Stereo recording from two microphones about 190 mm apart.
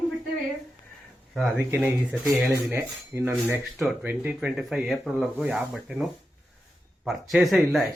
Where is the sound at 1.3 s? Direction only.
Centre (ahead or behind).